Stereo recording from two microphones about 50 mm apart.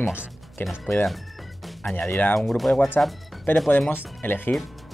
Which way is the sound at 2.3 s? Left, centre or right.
Centre.